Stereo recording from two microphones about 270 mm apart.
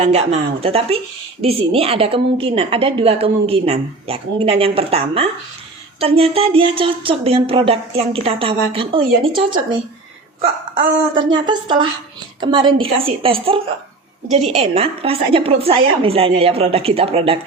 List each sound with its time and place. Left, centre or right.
0.0 s a woman's voice: right
10.8 s a woman's voice: right
11.3 s a woman's voice: centre